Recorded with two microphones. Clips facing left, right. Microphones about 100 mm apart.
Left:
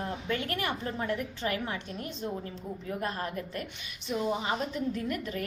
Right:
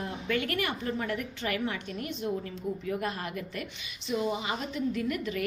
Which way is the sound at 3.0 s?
35° left (ahead or behind).